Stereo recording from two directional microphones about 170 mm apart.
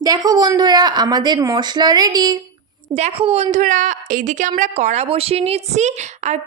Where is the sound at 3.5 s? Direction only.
50° right (ahead or behind).